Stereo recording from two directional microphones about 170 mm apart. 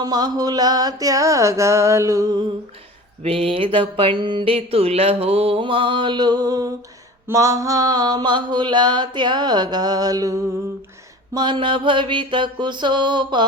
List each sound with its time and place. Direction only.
0.0 s mantra: 25° right (ahead or behind)
3.2 s a sound: 35° right (ahead or behind)
7.3 s mantra: 20° right (ahead or behind)